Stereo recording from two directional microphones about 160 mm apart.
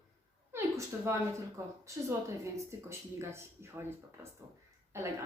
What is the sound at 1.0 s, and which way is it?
Speech, 20° right (ahead or behind).